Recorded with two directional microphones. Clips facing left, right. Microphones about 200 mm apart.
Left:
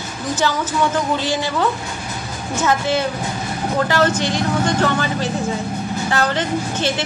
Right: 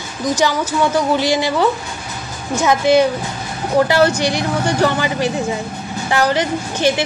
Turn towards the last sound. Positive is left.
turn(degrees=-10)  # may be behind; listen again after turning